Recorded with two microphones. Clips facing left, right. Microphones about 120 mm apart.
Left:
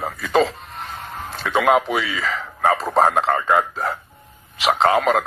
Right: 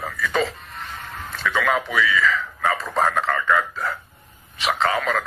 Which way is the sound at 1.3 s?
35° left (ahead or behind).